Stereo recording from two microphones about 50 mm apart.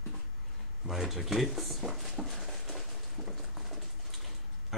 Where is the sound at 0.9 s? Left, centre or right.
Centre.